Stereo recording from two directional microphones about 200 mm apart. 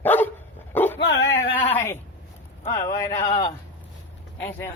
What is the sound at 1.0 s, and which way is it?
Dog, 60° left (ahead or behind).